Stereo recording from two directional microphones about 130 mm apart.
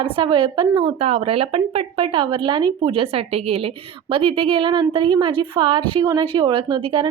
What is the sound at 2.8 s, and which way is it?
A woman's voice, 45° right (ahead or behind).